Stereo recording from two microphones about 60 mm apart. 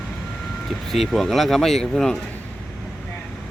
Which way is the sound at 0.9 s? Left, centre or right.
Centre.